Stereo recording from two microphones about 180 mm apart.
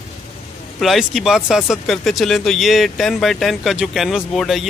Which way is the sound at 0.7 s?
Centre (ahead or behind).